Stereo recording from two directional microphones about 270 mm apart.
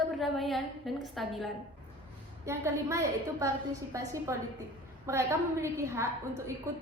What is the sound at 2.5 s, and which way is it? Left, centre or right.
A woman's voice, centre.